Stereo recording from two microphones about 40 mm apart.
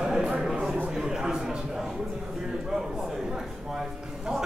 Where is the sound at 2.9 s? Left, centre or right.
Centre.